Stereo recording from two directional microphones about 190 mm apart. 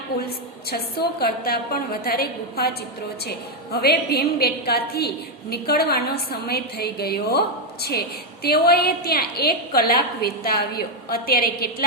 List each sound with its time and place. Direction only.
0.7 s a woman's voice: 55° left (ahead or behind)